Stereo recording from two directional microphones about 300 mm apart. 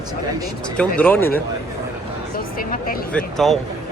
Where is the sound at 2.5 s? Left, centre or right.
Left.